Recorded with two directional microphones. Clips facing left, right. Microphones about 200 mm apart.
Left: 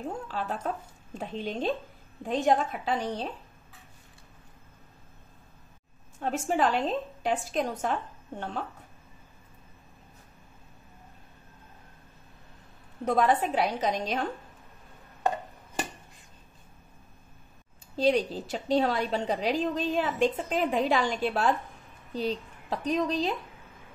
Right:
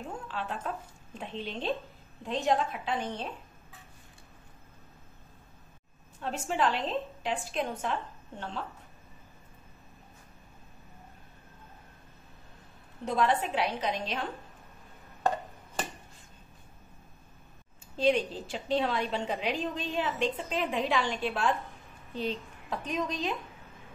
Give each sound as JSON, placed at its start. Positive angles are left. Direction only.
{"t": 0.3, "sound": "a woman's voice", "side_deg": 40}
{"t": 6.1, "sound": "a woman's voice", "side_deg": 45}
{"t": 13.0, "sound": "a woman's voice", "side_deg": 45}
{"t": 17.9, "sound": "a woman's voice", "side_deg": 40}